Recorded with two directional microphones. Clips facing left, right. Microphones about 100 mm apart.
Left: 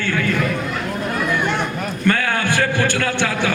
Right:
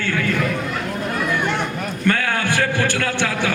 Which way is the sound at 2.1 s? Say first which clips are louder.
Left 1 dB; 25° left (ahead or behind).